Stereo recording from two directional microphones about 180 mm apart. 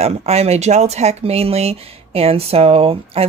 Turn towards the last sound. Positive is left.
turn(degrees=-35)  # may be behind; listen again after turning